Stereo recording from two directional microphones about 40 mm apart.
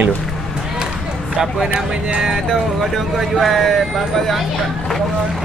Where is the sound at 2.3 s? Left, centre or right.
Centre.